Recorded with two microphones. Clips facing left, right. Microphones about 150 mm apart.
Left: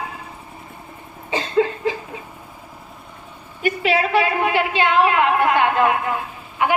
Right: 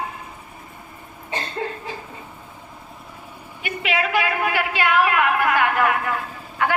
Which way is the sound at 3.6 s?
35° left (ahead or behind).